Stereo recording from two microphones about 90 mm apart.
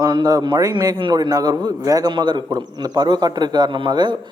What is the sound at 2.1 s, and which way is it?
A man's voice, 55° right (ahead or behind).